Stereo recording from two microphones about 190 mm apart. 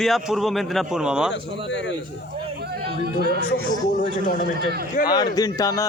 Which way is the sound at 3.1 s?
55° right (ahead or behind).